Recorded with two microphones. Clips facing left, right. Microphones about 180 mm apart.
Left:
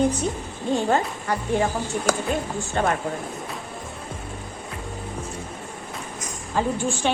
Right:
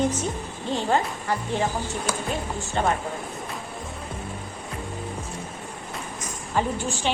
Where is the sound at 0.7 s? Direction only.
50° left (ahead or behind).